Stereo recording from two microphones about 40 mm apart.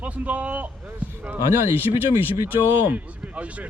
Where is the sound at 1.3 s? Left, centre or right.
Right.